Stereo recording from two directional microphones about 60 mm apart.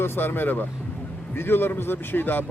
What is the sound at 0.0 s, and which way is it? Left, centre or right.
Speech, left.